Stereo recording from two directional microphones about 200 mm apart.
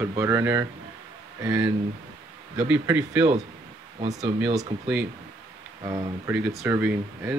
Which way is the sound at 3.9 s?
30° right (ahead or behind).